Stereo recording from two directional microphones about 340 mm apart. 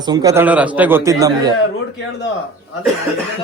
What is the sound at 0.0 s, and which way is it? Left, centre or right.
Speech, centre.